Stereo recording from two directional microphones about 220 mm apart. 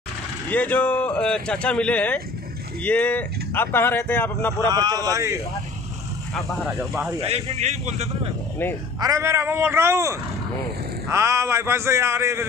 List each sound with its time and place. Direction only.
0.5 s speech: 5° left (ahead or behind)
4.6 s speech: 15° right (ahead or behind)
6.6 s speech: centre (ahead or behind)
7.2 s a man's voice: 30° right (ahead or behind)
9.0 s speech: 15° right (ahead or behind)